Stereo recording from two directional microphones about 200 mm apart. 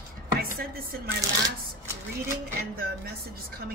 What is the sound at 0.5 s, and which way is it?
Speech, 50° right (ahead or behind).